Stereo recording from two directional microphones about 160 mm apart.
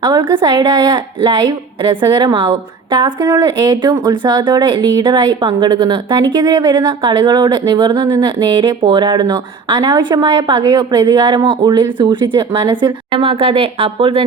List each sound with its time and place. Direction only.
0.0 s a woman's voice: 30° right (ahead or behind)